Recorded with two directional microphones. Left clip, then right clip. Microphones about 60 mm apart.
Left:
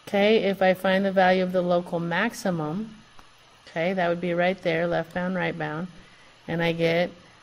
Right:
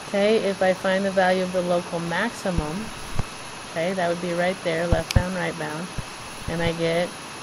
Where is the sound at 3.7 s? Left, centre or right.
Centre.